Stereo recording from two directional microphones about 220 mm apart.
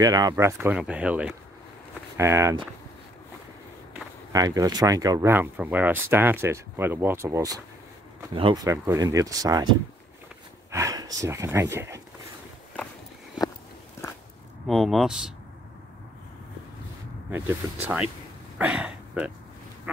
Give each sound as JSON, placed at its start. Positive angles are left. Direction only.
{"t": 0.0, "sound": "speech", "side_deg": -15}
{"t": 3.9, "sound": "speech", "side_deg": -15}
{"t": 10.7, "sound": "a sound", "side_deg": -15}
{"t": 11.1, "sound": "speech", "side_deg": -15}
{"t": 14.7, "sound": "speech", "side_deg": 0}
{"t": 17.6, "sound": "speech", "side_deg": -15}
{"t": 18.6, "sound": "speech", "side_deg": -5}